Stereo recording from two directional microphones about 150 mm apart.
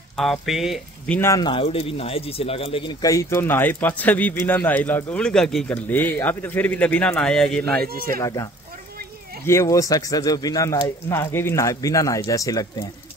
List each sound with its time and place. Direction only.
0.1 s speech: centre (ahead or behind)
1.0 s speech: 10° left (ahead or behind)
1.3 s speech: 30° left (ahead or behind)
3.0 s speech: 20° left (ahead or behind); by 7.9 s 5° left (ahead or behind)
7.9 s speech: 75° right (ahead or behind)
8.2 s speech: 20° left (ahead or behind)
9.5 s speech: 20° left (ahead or behind)